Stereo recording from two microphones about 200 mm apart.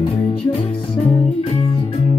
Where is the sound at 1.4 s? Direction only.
30° left (ahead or behind).